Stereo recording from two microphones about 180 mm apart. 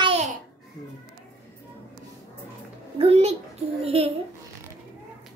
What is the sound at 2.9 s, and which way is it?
A child's voice, 35° right (ahead or behind).